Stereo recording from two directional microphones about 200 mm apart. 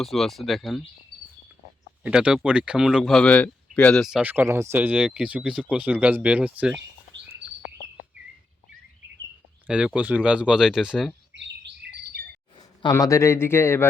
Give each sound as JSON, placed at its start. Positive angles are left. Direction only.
{"t": 0.0, "sound": "speech", "side_deg": 0}
{"t": 2.0, "sound": "speech", "side_deg": -5}
{"t": 9.6, "sound": "speech", "side_deg": -5}
{"t": 11.3, "sound": "bird", "side_deg": -60}
{"t": 12.5, "sound": "speech", "side_deg": 20}